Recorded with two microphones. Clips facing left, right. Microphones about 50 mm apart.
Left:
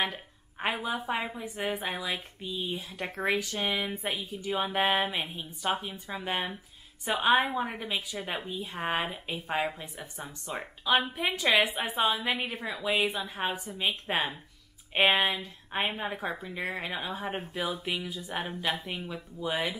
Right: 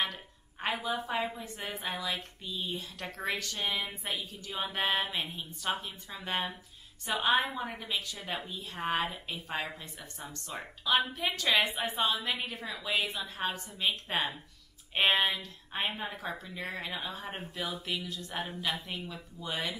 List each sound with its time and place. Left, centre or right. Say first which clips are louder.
0.0 s a sound: left 3 dB; centre
0.8 s a woman's voice: left 1 dB; centre
12.2 s a woman's voice: left 4 dB; left
14.0 s a woman's voice: left 3 dB; left
15.0 s a woman's voice: left 3 dB; centre
15.3 s a woman's voice: left 4 dB; centre
19.4 s a woman's voice: left 5 dB; centre